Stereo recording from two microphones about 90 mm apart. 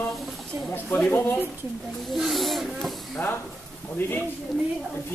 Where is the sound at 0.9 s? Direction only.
20° left (ahead or behind).